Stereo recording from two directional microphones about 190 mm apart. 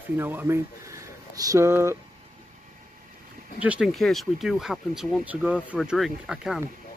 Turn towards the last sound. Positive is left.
turn(degrees=-5)  # may be behind; listen again after turning